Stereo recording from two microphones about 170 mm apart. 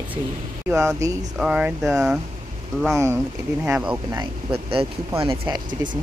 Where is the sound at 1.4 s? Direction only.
5° right (ahead or behind).